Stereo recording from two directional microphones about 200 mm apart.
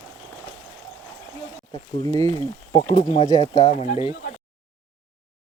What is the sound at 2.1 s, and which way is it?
Speech, 20° left (ahead or behind).